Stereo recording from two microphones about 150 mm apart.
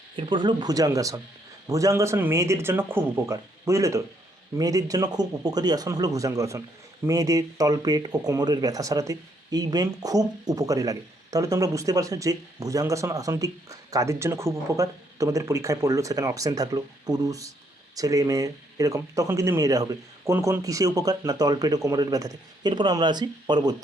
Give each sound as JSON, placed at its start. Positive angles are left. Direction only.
{"t": 0.2, "sound": "speech", "side_deg": -30}